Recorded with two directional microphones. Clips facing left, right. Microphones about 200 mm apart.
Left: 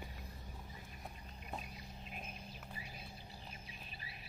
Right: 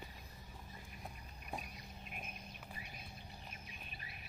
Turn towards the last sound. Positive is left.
turn(degrees=30)  # may be behind; listen again after turning